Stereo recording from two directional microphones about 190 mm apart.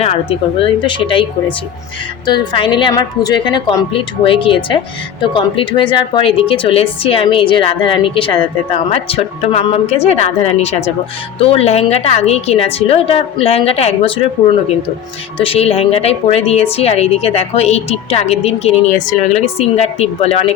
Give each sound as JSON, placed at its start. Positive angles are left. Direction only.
{"t": 0.0, "sound": "a woman's voice", "side_deg": 30}
{"t": 2.2, "sound": "a woman's voice", "side_deg": 20}
{"t": 15.4, "sound": "a woman's voice", "side_deg": 30}